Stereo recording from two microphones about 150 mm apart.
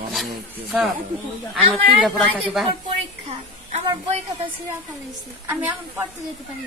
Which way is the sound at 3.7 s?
40° right (ahead or behind).